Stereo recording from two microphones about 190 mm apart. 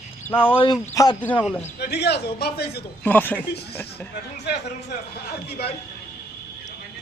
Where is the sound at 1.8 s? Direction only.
60° left (ahead or behind).